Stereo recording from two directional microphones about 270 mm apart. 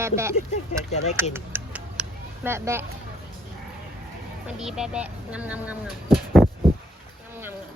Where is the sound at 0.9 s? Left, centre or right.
Left.